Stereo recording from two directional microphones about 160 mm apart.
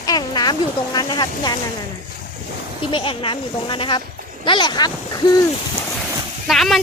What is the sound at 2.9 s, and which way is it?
Speech, 35° left (ahead or behind).